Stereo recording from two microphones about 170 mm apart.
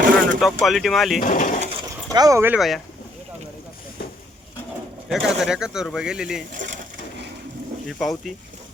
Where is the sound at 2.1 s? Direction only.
20° right (ahead or behind).